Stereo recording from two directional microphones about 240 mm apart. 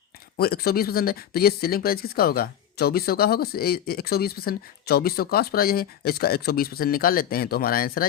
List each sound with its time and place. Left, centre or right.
0.3 s speech: left